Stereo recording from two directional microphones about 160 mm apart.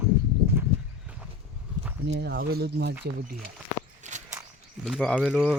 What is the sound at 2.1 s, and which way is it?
Speech, 90° right.